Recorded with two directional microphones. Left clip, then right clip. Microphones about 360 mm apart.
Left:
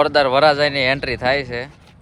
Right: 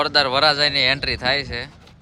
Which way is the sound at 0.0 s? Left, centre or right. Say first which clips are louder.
Left 3 dB; centre.